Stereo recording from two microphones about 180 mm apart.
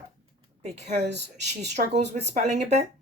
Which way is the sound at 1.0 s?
70° right (ahead or behind).